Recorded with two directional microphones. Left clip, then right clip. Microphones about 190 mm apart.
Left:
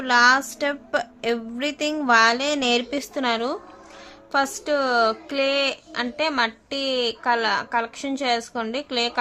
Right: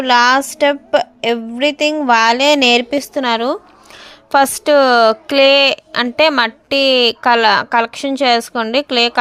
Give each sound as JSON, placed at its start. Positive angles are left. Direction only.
{"t": 0.0, "sound": "a woman's voice", "side_deg": -35}